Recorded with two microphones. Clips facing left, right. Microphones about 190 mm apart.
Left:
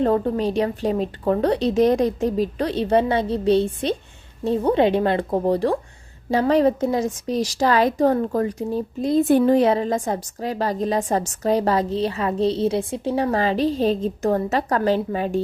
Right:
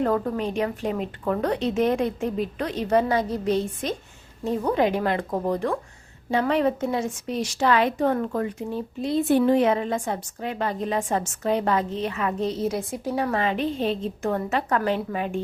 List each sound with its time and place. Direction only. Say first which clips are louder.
0.0 s a woman's voice: left 4 dB; 30° left (ahead or behind)